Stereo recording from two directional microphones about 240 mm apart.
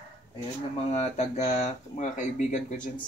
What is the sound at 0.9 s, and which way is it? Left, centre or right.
Speech, left.